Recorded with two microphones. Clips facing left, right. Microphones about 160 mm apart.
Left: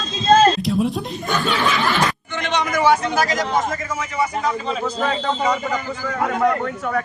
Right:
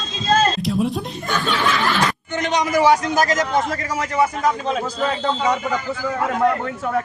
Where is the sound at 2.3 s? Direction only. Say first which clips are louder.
Right 3 dB; 40° right (ahead or behind).